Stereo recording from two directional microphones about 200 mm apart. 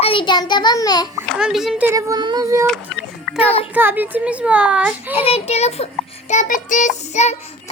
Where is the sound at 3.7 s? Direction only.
10° right (ahead or behind).